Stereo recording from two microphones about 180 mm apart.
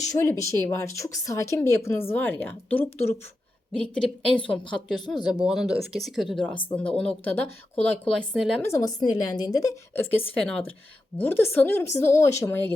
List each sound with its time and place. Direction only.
0.1 s a woman's voice: 15° left (ahead or behind); by 8.5 s centre (ahead or behind)
8.6 s a woman's voice: 20° left (ahead or behind)
11.2 s a woman's voice: 10° left (ahead or behind)